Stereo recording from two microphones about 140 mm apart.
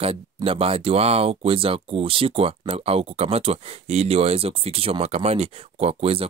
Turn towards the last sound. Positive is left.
turn(degrees=-45)  # may be behind; listen again after turning